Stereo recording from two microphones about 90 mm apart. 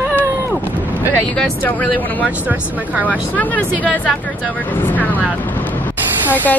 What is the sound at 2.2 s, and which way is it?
Speech, 15° right (ahead or behind).